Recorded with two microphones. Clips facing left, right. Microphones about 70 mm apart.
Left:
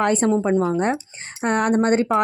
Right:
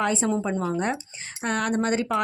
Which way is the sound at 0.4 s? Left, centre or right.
Left.